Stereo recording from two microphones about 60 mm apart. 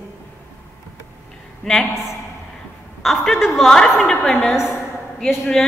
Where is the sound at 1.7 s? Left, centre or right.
Centre.